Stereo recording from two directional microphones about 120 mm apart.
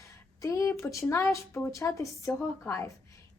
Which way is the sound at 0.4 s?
25° left (ahead or behind).